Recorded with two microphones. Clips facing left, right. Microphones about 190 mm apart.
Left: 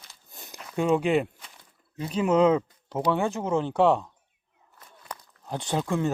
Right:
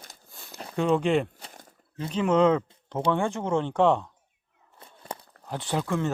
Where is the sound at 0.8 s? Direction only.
10° left (ahead or behind).